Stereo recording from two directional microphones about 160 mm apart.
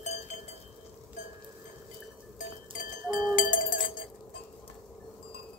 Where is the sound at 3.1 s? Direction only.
55° left (ahead or behind).